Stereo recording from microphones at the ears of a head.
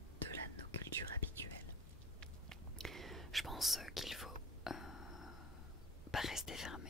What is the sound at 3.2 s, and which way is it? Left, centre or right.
Whispering, centre.